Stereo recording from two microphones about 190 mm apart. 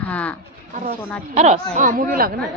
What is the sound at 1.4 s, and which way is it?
Speech, 35° right (ahead or behind).